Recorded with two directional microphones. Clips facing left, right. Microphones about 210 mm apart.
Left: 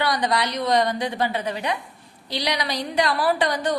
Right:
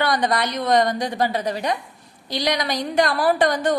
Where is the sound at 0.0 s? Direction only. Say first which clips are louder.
Right 2 dB; 50° right (ahead or behind).